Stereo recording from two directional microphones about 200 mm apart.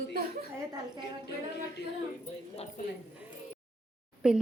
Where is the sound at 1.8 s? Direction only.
55° left (ahead or behind).